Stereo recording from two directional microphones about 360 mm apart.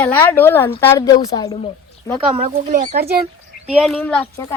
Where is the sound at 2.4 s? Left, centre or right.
Centre.